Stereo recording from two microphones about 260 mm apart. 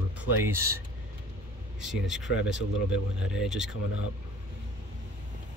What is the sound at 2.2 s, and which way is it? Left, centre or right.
Speech, left.